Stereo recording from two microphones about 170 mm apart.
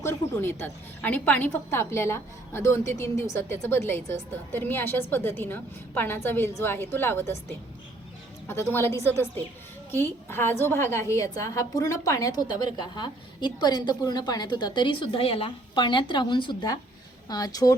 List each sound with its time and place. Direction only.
0.0 s a woman's voice: 15° left (ahead or behind)
8.4 s a woman's voice: 15° left (ahead or behind)